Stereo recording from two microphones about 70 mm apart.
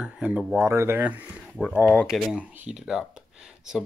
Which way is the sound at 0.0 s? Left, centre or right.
Centre.